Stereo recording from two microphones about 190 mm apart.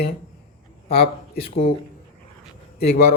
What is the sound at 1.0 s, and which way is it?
Speech, 55° left (ahead or behind).